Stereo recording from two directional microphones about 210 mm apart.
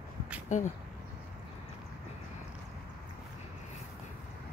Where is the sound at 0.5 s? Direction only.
35° left (ahead or behind).